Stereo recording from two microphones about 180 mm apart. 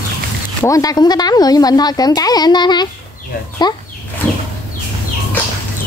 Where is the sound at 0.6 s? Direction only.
20° left (ahead or behind).